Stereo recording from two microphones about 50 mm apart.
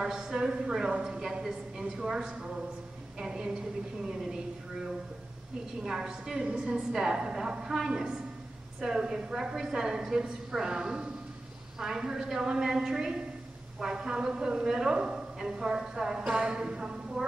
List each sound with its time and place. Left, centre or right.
0.0 s a woman's voice: centre
5.9 s a woman's voice: centre